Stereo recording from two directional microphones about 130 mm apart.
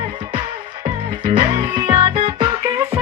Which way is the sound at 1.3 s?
40° right (ahead or behind).